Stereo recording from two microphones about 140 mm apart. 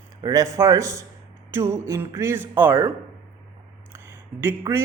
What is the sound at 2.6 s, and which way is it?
Speech, 15° right (ahead or behind).